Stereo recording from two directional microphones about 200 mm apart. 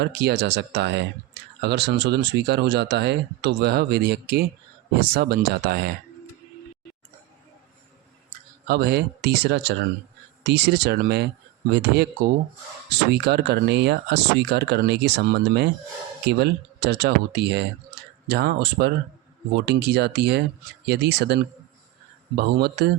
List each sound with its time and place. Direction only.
0.0 s speech: 55° right (ahead or behind)
8.6 s speech: 55° right (ahead or behind)
13.1 s speech: 55° right (ahead or behind)